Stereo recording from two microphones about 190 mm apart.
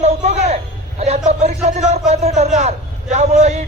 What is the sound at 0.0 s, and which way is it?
A man's voice, 35° right (ahead or behind).